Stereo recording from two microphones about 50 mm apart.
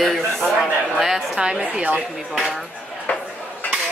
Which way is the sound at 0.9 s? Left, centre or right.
Centre.